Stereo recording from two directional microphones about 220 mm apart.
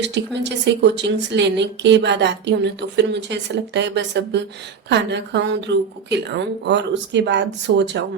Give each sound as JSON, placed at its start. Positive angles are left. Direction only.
{"t": 0.0, "sound": "a woman's voice", "side_deg": -50}